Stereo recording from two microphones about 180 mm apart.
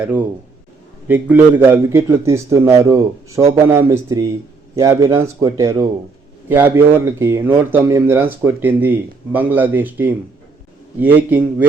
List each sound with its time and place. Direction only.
1.0 s speech: 10° right (ahead or behind)